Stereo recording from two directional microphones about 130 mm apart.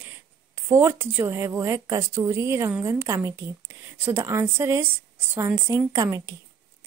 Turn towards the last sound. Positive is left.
turn(degrees=-25)  # may be behind; listen again after turning